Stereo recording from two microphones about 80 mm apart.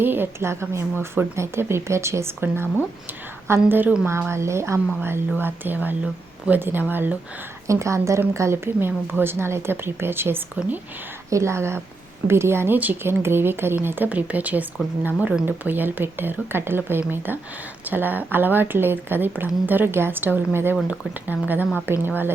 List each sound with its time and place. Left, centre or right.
0.0 s speech: right
3.7 s a woman's voice: right
4.3 s a woman's voice: right
7.7 s a woman's voice: right